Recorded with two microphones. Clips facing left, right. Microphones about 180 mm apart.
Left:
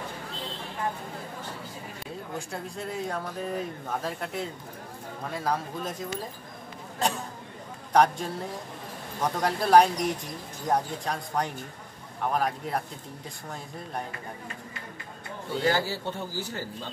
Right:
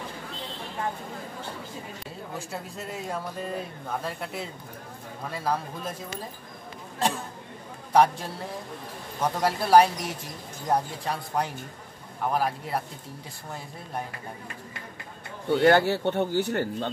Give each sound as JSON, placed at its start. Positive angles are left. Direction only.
{"t": 2.3, "sound": "speech", "side_deg": -5}
{"t": 7.9, "sound": "speech", "side_deg": 0}
{"t": 15.6, "sound": "speech", "side_deg": -65}